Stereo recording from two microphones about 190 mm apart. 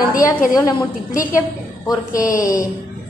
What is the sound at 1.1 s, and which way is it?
Speech, 45° left (ahead or behind).